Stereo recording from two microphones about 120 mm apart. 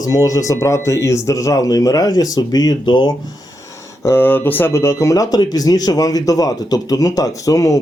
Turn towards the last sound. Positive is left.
turn(degrees=30)  # may be behind; listen again after turning